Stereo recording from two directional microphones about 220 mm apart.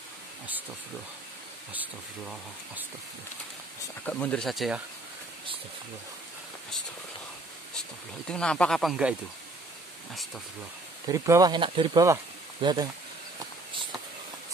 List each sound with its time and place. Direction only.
1.7 s speech: 5° right (ahead or behind)
4.0 s speech: 5° left (ahead or behind)
8.3 s speech: 5° left (ahead or behind)
11.1 s speech: 15° right (ahead or behind)